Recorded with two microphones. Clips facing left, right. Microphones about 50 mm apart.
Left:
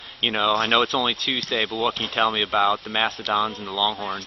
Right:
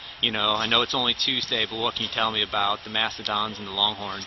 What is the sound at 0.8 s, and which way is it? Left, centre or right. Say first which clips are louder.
A man's voice: left 3 dB; left.